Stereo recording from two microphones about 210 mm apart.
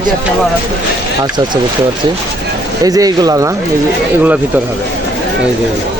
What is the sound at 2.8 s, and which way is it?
Speech, 15° right (ahead or behind).